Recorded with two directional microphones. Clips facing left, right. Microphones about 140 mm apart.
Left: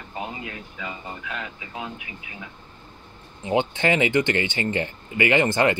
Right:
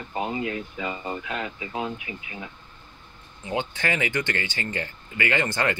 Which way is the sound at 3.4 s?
20° left (ahead or behind).